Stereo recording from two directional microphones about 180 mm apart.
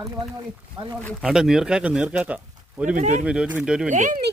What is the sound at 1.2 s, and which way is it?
Speech, 5° right (ahead or behind).